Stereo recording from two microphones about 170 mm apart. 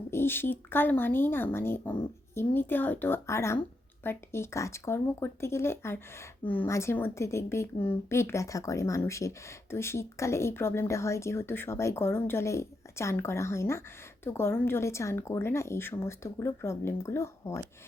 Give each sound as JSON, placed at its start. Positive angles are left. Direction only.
{"t": 0.1, "sound": "speech", "side_deg": 15}